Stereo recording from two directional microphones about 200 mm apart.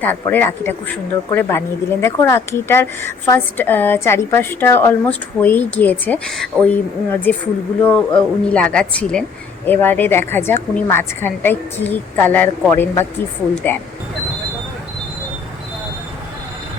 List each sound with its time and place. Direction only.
0.0 s a woman's voice: 10° left (ahead or behind)